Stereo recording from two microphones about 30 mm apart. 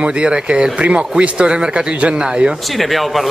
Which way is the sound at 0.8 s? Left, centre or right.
Right.